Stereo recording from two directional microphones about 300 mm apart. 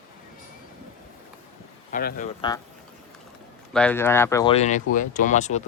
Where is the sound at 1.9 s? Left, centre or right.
Left.